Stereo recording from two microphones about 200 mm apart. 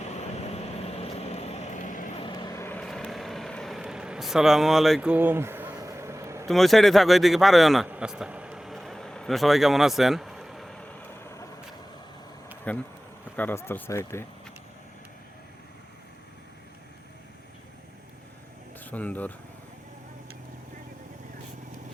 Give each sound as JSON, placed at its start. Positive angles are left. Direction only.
{"t": 0.1, "sound": "vehicle", "side_deg": 30}
{"t": 2.2, "sound": "vehicle", "side_deg": 20}
{"t": 6.5, "sound": "a sound", "side_deg": 0}
{"t": 12.7, "sound": "speech", "side_deg": 5}
{"t": 18.9, "sound": "speech", "side_deg": 10}